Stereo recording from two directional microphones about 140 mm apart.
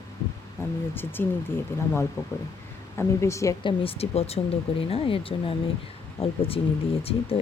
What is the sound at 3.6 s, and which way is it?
Speech, 40° left (ahead or behind).